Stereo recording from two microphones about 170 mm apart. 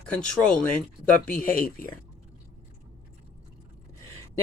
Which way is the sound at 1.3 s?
55° left (ahead or behind).